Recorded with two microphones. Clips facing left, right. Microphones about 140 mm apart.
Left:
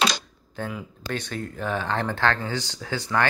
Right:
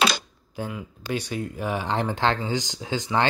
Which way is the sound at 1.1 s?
10° right (ahead or behind).